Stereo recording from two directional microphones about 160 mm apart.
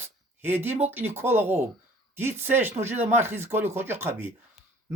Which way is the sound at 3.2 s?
15° right (ahead or behind).